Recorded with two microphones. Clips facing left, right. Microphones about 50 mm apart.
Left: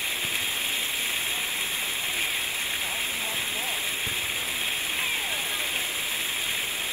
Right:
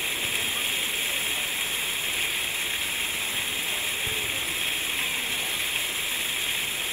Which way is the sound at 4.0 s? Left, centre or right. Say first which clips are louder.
Right 1 dB; centre.